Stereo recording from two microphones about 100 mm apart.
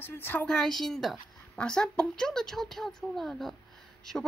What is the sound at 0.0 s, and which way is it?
Speech, 20° left (ahead or behind).